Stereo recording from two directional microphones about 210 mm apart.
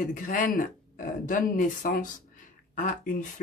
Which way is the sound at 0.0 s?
40° left (ahead or behind).